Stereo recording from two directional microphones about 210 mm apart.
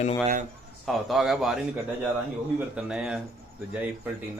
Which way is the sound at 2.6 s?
5° right (ahead or behind).